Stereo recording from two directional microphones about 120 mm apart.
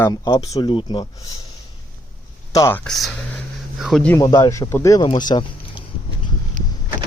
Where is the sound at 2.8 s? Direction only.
Centre (ahead or behind).